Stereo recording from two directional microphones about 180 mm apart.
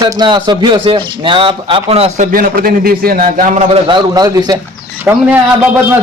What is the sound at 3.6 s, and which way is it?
Speech, 30° right (ahead or behind).